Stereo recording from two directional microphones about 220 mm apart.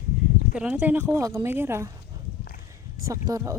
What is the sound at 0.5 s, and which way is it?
Speech, 5° right (ahead or behind).